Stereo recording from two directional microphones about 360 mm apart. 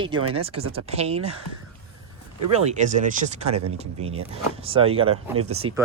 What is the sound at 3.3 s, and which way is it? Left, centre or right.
Speech, centre.